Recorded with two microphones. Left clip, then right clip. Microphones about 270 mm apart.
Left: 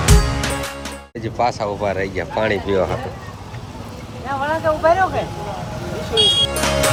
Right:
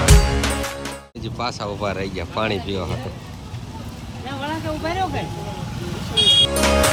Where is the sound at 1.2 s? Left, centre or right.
Centre.